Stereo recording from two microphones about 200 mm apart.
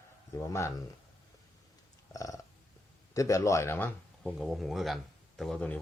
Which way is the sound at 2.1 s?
15° left (ahead or behind).